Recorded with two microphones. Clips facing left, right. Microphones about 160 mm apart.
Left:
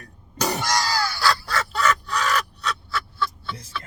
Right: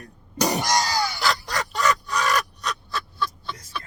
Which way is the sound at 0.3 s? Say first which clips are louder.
Right 2 dB; 15° right (ahead or behind).